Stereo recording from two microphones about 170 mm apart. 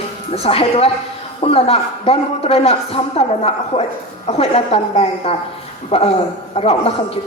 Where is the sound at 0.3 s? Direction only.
35° left (ahead or behind).